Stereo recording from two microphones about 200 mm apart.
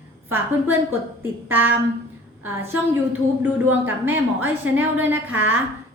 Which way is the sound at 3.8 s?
10° right (ahead or behind).